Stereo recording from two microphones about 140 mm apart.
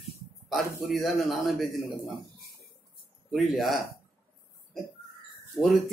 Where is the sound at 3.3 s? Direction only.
Centre (ahead or behind).